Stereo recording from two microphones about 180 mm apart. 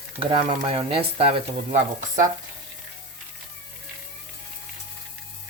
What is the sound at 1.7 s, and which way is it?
Speech, 45° right (ahead or behind).